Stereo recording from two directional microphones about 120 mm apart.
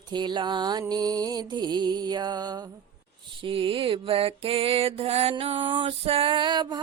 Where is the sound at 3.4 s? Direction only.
45° right (ahead or behind).